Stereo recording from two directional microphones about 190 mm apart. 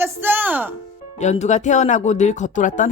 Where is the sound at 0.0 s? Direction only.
10° right (ahead or behind).